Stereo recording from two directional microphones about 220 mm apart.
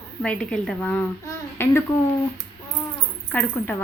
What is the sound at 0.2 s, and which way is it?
Speech, 5° left (ahead or behind).